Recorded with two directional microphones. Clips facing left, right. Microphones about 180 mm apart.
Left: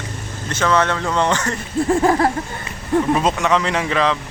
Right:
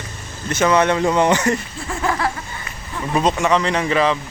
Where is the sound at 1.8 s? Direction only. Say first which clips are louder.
Left 6 dB; 35° left (ahead or behind).